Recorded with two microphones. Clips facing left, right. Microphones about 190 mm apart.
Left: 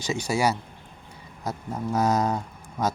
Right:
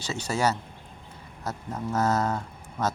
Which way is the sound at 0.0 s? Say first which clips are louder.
Left 2 dB; 15° left (ahead or behind).